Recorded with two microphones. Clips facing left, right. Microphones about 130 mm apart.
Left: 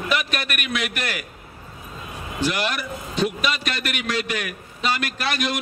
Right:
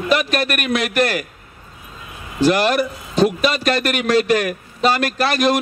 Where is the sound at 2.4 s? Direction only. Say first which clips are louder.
Right 9 dB; 40° right (ahead or behind).